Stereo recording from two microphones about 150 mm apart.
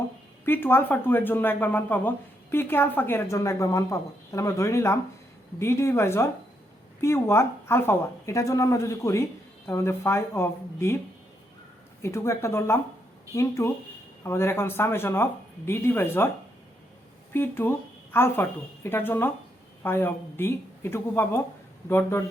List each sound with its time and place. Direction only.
0.4 s a woman's voice: 15° left (ahead or behind)
12.0 s a woman's voice: 20° left (ahead or behind)
17.3 s a woman's voice: 15° left (ahead or behind)